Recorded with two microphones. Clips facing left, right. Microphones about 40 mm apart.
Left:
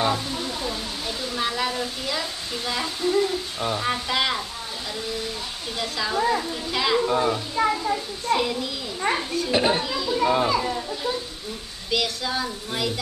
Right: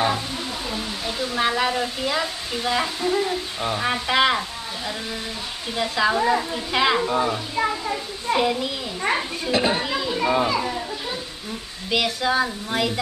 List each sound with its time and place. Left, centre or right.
0.7 s speech: right
10.4 s a child's voice: centre
11.9 s speech: right